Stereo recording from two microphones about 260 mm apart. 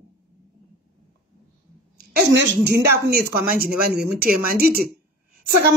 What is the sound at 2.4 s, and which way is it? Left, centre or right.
Speech, right.